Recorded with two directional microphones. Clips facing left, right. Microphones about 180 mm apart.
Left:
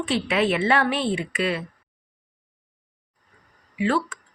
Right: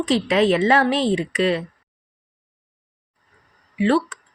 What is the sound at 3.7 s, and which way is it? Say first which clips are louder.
Speech: right 5 dB; 35° right (ahead or behind).